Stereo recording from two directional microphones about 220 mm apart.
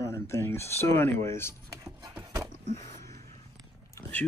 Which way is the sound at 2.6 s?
30° right (ahead or behind).